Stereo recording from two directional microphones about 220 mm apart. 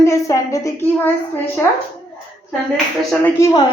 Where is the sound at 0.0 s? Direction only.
15° left (ahead or behind).